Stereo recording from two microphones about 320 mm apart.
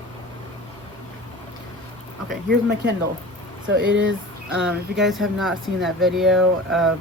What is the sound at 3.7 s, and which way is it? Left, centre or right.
Speech, right.